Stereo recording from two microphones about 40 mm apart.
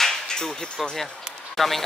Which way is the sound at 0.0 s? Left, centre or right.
Centre.